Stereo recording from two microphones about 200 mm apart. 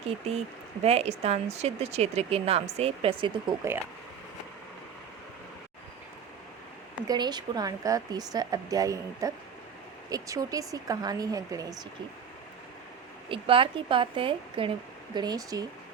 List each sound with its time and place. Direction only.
0.9 s speech: 30° right (ahead or behind)
7.1 s speech: 20° right (ahead or behind)
13.2 s speech: 25° right (ahead or behind)